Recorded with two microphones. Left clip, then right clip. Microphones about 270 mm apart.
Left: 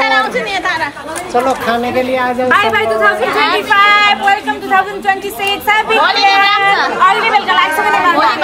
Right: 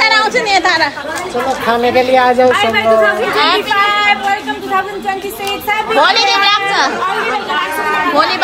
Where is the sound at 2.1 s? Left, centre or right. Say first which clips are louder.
Right 5 dB; right.